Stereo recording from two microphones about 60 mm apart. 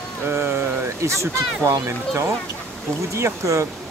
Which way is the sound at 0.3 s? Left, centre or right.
Right.